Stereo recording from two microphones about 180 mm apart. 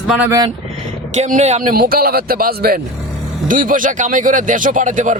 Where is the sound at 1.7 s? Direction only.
55° right (ahead or behind).